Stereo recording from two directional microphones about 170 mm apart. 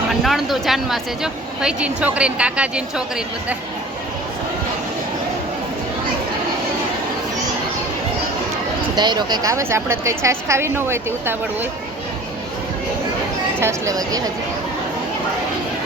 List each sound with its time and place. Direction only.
0.1 s speech: centre (ahead or behind)
9.0 s a woman's voice: 25° right (ahead or behind)
13.6 s speech: 15° right (ahead or behind)